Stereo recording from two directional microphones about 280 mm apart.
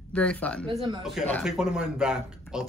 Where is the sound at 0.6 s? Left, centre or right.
Centre.